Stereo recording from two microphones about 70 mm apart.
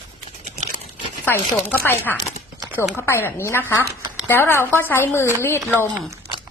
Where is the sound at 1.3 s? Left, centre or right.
Left.